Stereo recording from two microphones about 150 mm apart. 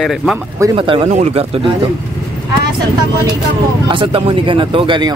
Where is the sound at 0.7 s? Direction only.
35° right (ahead or behind).